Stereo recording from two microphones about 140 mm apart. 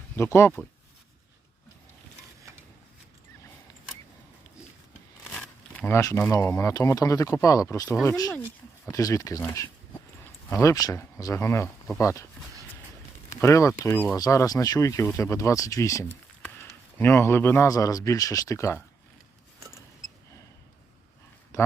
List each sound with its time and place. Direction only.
0.2 s speech: 20° left (ahead or behind)
5.3 s crumpling: 10° left (ahead or behind)
6.0 s speech: 20° left (ahead or behind)
13.4 s speech: 20° left (ahead or behind)
19.5 s vehicle: 25° right (ahead or behind)